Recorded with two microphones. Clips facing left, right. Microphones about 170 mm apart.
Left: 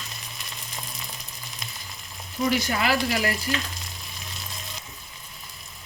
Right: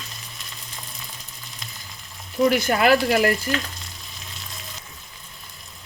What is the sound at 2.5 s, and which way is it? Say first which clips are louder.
Speech: right 6 dB; 55° right (ahead or behind).